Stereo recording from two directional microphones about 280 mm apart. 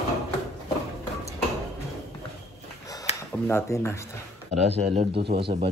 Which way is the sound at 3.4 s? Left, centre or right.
Centre.